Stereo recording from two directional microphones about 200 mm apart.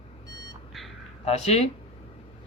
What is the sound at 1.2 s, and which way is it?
Speech, 35° left (ahead or behind).